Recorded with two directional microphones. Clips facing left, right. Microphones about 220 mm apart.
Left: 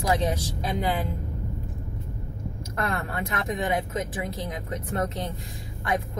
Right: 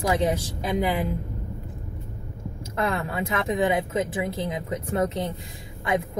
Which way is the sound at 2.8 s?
25° right (ahead or behind).